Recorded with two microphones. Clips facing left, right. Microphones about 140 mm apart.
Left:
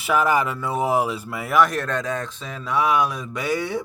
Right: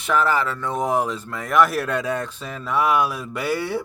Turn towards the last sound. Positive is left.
turn(degrees=-5)  # may be behind; listen again after turning